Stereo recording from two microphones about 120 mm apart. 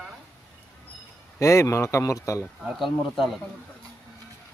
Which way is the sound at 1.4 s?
25° left (ahead or behind).